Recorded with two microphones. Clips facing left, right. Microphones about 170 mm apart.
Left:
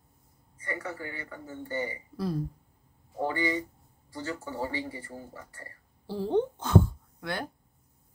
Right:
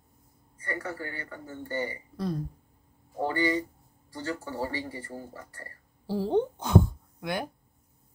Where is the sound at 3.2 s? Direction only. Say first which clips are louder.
Right 2 dB; 30° right (ahead or behind).